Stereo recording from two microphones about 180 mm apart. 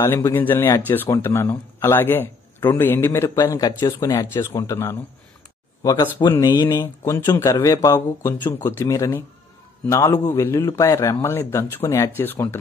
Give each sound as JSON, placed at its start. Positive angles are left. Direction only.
{"t": 0.0, "sound": "speech", "side_deg": 15}